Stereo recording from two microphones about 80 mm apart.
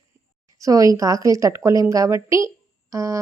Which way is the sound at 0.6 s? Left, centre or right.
Right.